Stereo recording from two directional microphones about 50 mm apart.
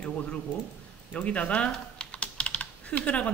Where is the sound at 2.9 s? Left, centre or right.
Left.